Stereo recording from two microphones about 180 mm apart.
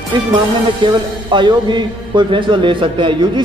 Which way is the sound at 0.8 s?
25° right (ahead or behind).